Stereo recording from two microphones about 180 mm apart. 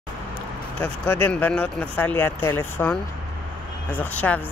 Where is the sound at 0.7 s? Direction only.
10° left (ahead or behind).